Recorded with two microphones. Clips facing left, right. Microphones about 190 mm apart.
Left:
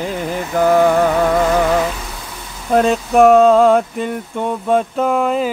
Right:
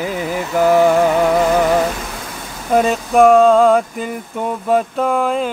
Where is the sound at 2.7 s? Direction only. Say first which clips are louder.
Left 1 dB; centre (ahead or behind).